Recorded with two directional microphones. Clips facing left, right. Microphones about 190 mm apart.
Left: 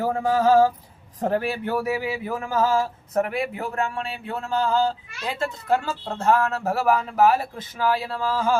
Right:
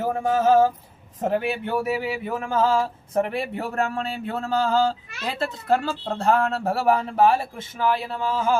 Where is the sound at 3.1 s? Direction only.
30° right (ahead or behind).